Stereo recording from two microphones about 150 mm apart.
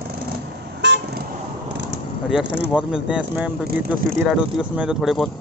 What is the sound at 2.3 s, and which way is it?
Speech, 5° right (ahead or behind).